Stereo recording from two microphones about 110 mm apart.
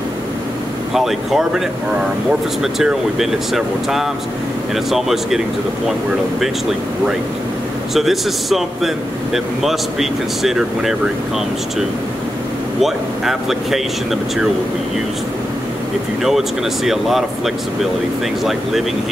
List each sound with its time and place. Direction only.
0.9 s speech: 5° right (ahead or behind)
2.6 s speech: 5° right (ahead or behind)
7.9 s speech: centre (ahead or behind)
12.8 s speech: 5° right (ahead or behind)
16.2 s speech: 5° right (ahead or behind)
18.4 s speech: centre (ahead or behind)